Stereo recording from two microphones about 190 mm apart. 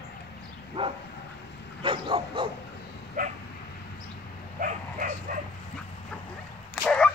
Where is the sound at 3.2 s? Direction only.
45° right (ahead or behind).